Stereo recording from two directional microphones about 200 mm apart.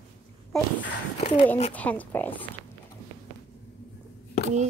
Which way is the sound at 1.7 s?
10° left (ahead or behind).